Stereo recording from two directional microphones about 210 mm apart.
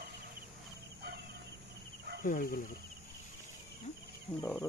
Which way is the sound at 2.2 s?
40° left (ahead or behind).